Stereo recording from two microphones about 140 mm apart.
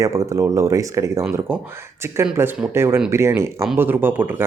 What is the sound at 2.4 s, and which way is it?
Speech, 20° right (ahead or behind).